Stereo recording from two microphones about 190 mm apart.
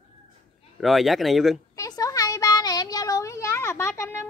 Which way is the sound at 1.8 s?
20° left (ahead or behind).